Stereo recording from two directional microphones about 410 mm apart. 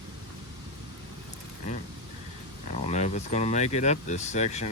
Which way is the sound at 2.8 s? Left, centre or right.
Centre.